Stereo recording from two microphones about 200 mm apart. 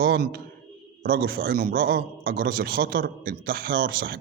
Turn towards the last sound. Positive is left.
turn(degrees=-50)  # may be behind; listen again after turning